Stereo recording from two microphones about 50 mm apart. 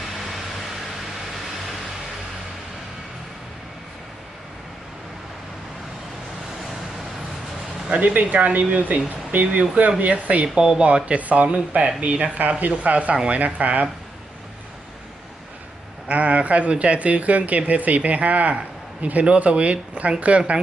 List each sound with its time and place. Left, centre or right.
0.2 s vehicle: centre
8.0 s speech: right
10.4 s speech: centre; by 13.8 s right
16.0 s speech: right